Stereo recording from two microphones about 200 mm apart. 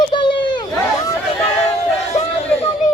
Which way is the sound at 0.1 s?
25° left (ahead or behind).